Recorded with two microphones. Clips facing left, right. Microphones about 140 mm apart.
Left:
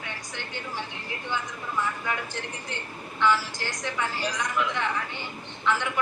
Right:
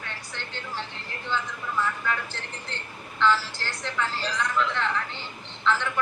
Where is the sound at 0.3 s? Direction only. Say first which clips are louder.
Even; 15° left (ahead or behind).